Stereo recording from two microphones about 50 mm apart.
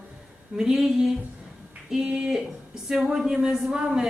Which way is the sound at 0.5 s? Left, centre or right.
Centre.